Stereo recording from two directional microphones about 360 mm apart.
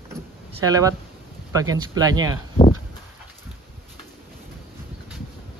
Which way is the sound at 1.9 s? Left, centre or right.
Centre.